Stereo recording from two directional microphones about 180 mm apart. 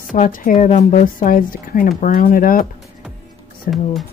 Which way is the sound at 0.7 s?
40° left (ahead or behind).